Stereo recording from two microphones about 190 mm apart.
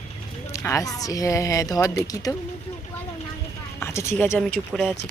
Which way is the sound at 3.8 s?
15° left (ahead or behind).